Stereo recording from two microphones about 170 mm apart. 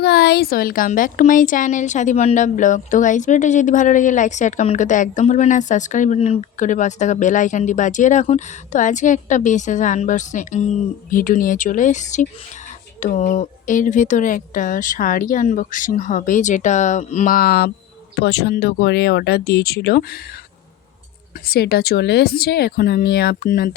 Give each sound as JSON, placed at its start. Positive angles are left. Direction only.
{"t": 0.0, "sound": "a woman's voice", "side_deg": 75}
{"t": 18.2, "sound": "speech", "side_deg": 75}
{"t": 21.4, "sound": "speech", "side_deg": 65}